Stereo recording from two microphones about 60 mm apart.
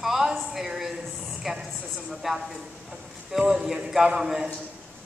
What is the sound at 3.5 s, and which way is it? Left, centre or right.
Speech, centre.